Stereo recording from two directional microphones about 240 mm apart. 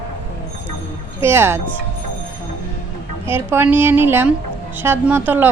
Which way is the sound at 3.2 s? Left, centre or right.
Centre.